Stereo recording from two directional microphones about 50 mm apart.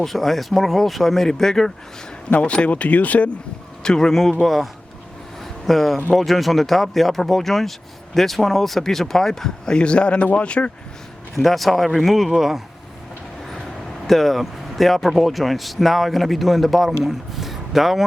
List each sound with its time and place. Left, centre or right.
0.0 s speech: centre
2.4 s speech: left
3.8 s speech: centre
5.4 s a sound: centre
6.1 s speech: centre; by 10.7 s left
11.3 s speech: centre
14.1 s speech: centre